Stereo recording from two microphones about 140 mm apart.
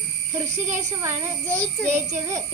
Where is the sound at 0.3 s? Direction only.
20° right (ahead or behind).